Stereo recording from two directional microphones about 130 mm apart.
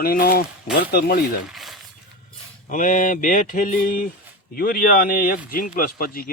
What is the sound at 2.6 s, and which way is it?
Mantra, 80° left.